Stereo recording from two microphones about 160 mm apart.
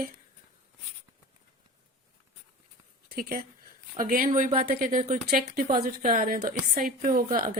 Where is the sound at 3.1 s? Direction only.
60° right (ahead or behind).